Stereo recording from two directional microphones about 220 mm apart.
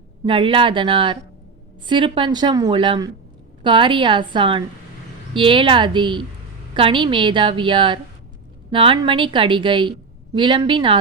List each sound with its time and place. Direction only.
0.3 s a woman's voice: 25° right (ahead or behind)